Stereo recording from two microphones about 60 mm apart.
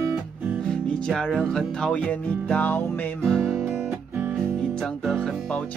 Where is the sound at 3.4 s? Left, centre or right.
Centre.